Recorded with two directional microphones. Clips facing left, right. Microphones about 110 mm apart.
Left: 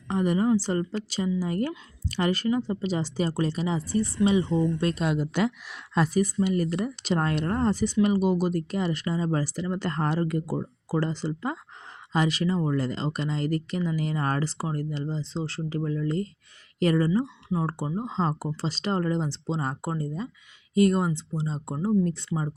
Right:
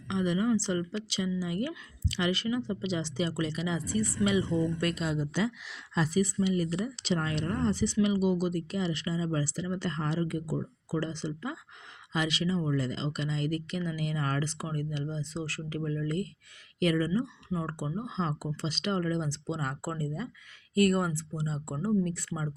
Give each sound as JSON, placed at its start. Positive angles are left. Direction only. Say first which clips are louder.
{"t": 0.1, "sound": "speech", "louder": "left 5 dB", "side_deg": 45}
{"t": 5.0, "sound": "speech", "louder": "left 5 dB", "side_deg": 70}